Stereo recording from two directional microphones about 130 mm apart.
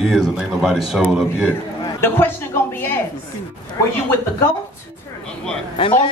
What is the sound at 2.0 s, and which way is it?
Speech, 15° left (ahead or behind).